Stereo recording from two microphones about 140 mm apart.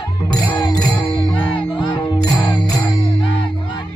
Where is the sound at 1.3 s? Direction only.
35° left (ahead or behind).